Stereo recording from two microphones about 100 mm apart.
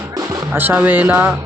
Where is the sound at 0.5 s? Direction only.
20° right (ahead or behind).